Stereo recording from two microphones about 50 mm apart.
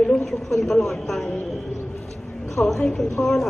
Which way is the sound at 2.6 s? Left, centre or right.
Left.